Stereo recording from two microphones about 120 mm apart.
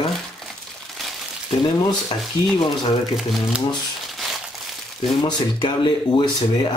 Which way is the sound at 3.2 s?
Centre (ahead or behind).